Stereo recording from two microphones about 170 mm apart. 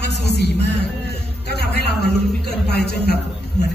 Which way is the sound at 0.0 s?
75° left (ahead or behind).